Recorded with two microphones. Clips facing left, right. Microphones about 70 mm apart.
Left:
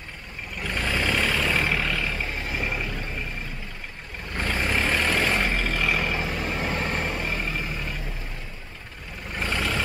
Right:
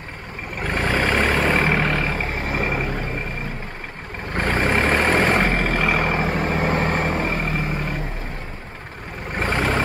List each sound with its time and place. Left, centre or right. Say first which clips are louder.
0.6 s vehicle: right 6 dB; right
4.3 s vehicle: right 6 dB; right
9.3 s vehicle: right 6 dB; right